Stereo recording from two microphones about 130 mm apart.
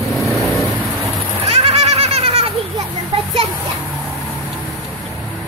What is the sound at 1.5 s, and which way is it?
Goat, 50° right (ahead or behind).